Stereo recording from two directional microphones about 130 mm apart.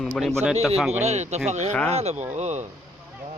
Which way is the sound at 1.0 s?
55° right (ahead or behind).